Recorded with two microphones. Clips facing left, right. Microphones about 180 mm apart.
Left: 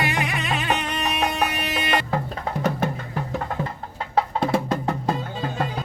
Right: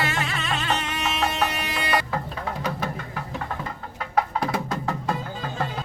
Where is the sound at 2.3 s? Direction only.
50° left (ahead or behind).